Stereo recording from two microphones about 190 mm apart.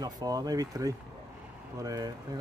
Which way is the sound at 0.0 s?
20° right (ahead or behind).